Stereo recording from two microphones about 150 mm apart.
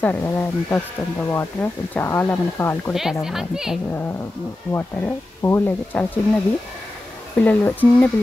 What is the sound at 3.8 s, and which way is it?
Speech, 10° left (ahead or behind).